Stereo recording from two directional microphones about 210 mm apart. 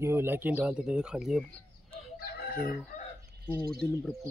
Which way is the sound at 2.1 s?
45° left (ahead or behind).